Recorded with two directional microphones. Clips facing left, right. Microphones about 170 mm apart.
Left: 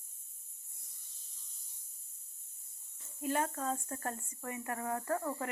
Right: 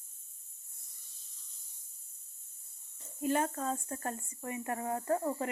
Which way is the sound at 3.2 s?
25° right (ahead or behind).